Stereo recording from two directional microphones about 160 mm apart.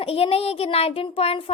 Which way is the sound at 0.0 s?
35° left (ahead or behind).